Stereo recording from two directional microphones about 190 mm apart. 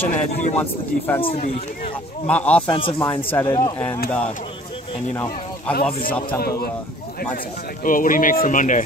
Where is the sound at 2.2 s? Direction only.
5° left (ahead or behind).